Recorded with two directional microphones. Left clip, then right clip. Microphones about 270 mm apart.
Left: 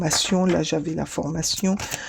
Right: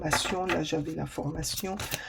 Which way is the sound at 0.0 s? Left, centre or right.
Left.